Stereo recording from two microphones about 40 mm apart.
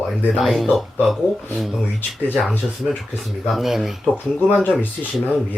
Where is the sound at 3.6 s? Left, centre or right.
Centre.